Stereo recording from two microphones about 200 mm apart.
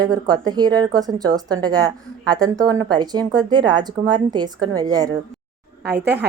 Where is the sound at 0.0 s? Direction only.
20° right (ahead or behind).